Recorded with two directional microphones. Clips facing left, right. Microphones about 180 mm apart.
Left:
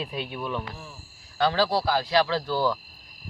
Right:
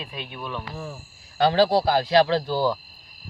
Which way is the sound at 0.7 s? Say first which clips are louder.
Right 8 dB; 50° right (ahead or behind).